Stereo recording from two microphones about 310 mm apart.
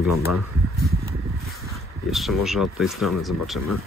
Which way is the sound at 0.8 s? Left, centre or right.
Right.